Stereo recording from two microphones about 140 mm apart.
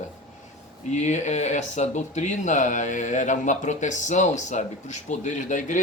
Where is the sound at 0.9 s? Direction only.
55° left (ahead or behind).